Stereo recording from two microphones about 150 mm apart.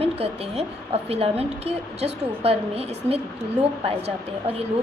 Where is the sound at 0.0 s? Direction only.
40° right (ahead or behind).